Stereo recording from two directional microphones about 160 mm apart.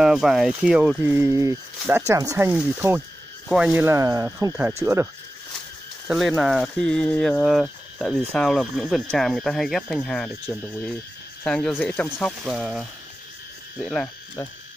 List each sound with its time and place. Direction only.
0.0 s speech: 5° right (ahead or behind)
6.0 s speech: 5° right (ahead or behind)